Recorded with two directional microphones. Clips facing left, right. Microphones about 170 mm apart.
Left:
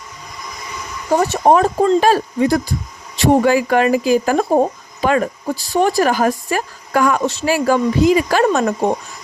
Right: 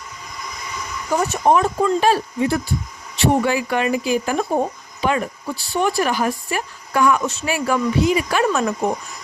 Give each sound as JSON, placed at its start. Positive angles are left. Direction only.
{"t": 1.1, "sound": "speech", "side_deg": 30}